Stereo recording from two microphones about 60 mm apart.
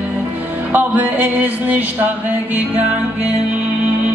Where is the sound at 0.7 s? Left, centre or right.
Right.